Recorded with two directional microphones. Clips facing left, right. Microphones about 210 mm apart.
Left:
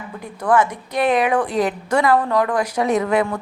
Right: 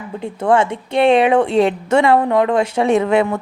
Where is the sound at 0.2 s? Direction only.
25° right (ahead or behind).